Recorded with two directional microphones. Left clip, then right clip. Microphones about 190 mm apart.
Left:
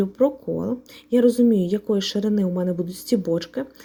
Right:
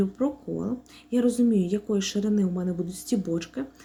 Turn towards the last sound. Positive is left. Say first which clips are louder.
# left 6 dB
turn(degrees=35)  # may be behind; listen again after turning